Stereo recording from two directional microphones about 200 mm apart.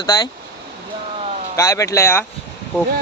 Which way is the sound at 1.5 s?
15° left (ahead or behind).